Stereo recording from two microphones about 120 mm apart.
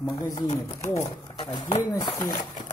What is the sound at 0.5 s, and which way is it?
Speech, 25° left (ahead or behind).